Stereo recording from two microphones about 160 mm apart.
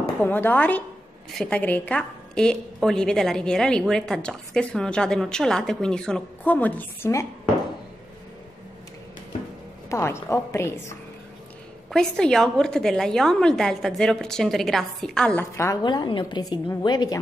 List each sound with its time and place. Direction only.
0.2 s a woman's voice: 10° left (ahead or behind)
9.8 s a woman's voice: 15° left (ahead or behind)
11.9 s a woman's voice: 5° left (ahead or behind)
15.5 s a woman's voice: 15° left (ahead or behind)
15.8 s a woman's voice: 30° left (ahead or behind)